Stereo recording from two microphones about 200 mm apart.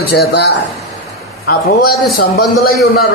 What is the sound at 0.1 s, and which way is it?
A man's voice, 55° left (ahead or behind).